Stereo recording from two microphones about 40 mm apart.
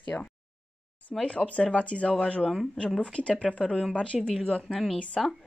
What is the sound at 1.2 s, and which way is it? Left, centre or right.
A woman's voice, left.